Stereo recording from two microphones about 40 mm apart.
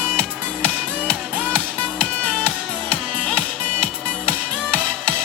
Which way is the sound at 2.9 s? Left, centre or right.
Left.